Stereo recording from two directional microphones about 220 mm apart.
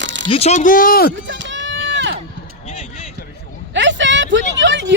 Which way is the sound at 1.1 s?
55° right (ahead or behind).